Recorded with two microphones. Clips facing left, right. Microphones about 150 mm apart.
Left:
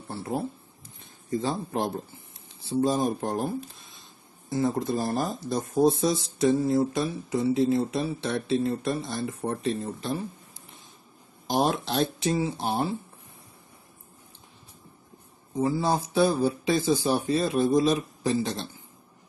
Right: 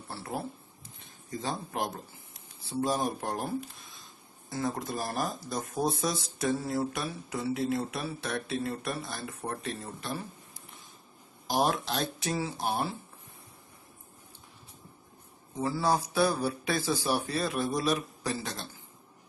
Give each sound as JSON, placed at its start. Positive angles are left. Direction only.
{"t": 0.1, "sound": "speech", "side_deg": 20}
{"t": 11.4, "sound": "speech", "side_deg": 25}
{"t": 15.5, "sound": "speech", "side_deg": 20}